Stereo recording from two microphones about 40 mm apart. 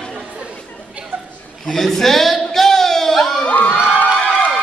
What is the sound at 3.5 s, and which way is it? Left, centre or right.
Crowd, left.